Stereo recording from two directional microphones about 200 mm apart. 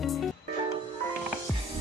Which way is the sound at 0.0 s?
Centre (ahead or behind).